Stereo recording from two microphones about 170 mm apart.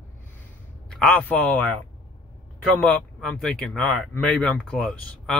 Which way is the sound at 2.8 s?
5° left (ahead or behind).